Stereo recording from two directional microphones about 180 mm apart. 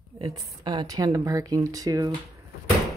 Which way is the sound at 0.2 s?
25° right (ahead or behind).